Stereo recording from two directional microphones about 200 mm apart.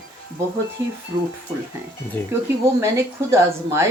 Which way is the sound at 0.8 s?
10° right (ahead or behind).